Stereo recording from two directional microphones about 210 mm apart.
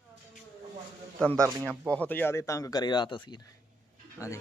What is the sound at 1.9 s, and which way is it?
Speech, 10° left (ahead or behind).